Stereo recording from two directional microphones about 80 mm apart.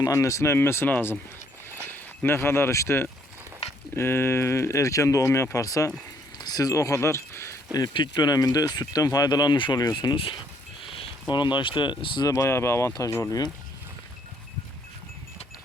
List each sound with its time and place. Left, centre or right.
0.0 s speech: left
6.4 s a sound: left
7.9 s speech: left
12.3 s speech: left